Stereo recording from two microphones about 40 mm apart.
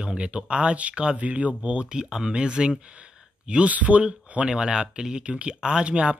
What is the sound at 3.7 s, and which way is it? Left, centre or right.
Speech, right.